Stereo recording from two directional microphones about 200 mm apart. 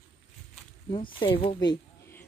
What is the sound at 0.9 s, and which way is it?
Speech, 25° left (ahead or behind).